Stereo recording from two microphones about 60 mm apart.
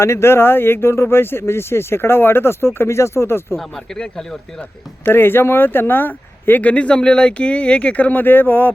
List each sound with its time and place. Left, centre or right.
0.0 s speech: left
3.9 s speech: centre
5.0 s speech: left